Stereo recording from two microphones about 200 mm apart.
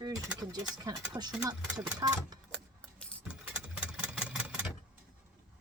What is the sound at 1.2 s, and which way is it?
Speech, 20° right (ahead or behind).